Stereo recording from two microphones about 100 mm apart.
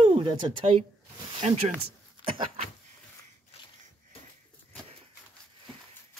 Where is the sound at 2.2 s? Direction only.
80° right.